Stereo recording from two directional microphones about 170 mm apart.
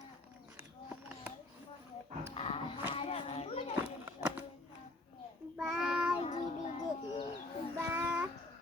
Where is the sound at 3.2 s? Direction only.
40° left (ahead or behind).